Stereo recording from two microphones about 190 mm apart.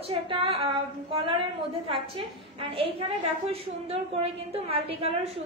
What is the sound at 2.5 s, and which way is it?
A woman's voice, 30° right (ahead or behind).